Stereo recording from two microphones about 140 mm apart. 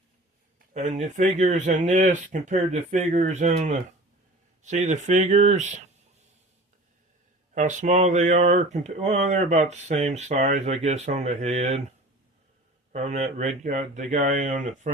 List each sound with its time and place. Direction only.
0.7 s speech: 60° right (ahead or behind)
7.5 s speech: 60° right (ahead or behind)
12.9 s speech: 55° right (ahead or behind)